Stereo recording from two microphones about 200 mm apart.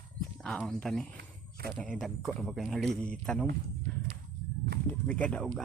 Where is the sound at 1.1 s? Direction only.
50° right (ahead or behind).